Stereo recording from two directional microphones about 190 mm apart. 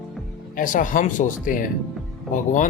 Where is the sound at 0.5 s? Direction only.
45° left (ahead or behind).